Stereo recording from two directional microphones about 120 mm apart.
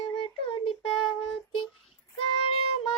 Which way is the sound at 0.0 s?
45° left (ahead or behind).